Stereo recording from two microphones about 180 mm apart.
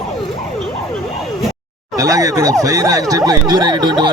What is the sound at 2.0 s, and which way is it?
Speech, 20° right (ahead or behind).